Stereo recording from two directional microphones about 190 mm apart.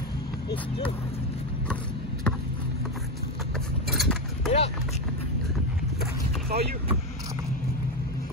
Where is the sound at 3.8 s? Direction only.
Centre (ahead or behind).